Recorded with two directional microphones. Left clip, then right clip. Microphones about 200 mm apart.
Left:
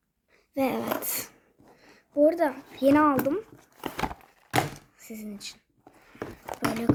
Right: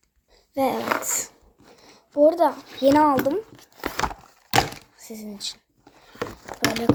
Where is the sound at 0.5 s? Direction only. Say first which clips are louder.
Right 5 dB; 10° left (ahead or behind).